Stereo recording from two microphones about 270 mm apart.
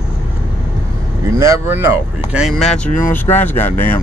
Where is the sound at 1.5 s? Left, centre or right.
Centre.